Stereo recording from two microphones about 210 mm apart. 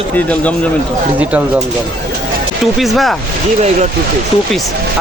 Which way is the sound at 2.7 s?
Centre (ahead or behind).